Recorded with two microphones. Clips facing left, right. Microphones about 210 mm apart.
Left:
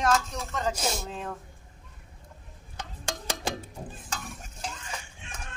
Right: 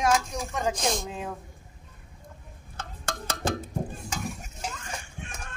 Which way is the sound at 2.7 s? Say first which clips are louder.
Right 1 dB; 15° left (ahead or behind).